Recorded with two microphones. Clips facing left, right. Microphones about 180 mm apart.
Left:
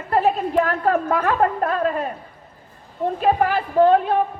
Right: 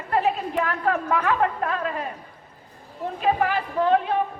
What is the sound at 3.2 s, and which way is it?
Speech, 45° left (ahead or behind).